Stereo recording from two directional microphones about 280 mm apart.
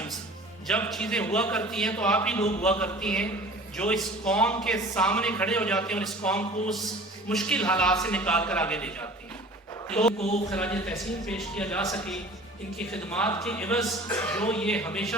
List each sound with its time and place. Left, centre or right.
0.7 s a man's voice: centre
10.2 s speech: left
10.5 s a man's voice: centre